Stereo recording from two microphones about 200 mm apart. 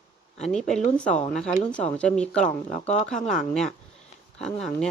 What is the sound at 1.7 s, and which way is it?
Speech, 5° left (ahead or behind).